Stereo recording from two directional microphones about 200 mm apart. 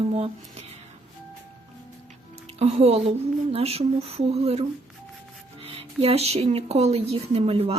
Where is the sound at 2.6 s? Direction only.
30° right (ahead or behind).